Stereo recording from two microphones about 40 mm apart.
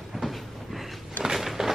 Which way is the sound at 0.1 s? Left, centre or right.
Centre.